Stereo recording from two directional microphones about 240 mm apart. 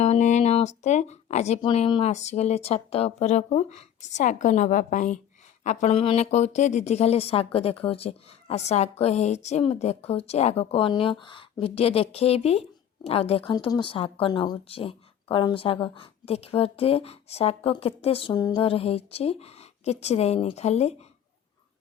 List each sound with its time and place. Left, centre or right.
0.0 s speech: left